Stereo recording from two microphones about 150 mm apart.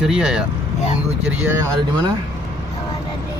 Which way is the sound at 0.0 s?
5° right (ahead or behind).